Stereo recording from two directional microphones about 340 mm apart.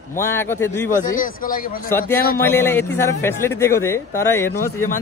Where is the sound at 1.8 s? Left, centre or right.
Centre.